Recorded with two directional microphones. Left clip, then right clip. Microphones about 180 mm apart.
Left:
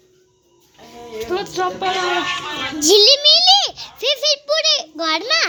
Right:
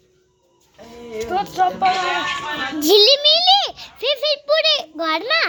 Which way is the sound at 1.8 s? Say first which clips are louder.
Right 1 dB; 35° left (ahead or behind).